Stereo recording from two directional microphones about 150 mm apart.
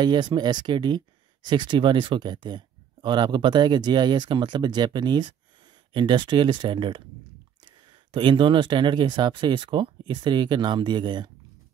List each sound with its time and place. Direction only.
0.0 s speech: 30° right (ahead or behind)
8.1 s speech: 35° right (ahead or behind)